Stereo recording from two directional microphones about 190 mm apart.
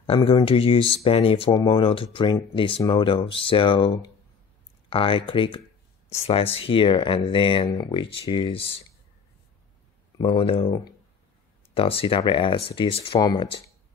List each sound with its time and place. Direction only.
0.0 s speech: 30° left (ahead or behind)
10.1 s speech: 25° left (ahead or behind)
11.7 s speech: 30° left (ahead or behind)